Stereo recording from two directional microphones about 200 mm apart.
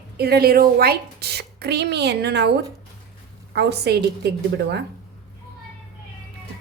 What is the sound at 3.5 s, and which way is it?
Speech, 55° right (ahead or behind).